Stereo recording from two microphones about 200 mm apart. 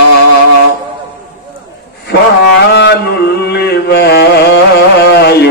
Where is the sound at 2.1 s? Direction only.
55° left (ahead or behind).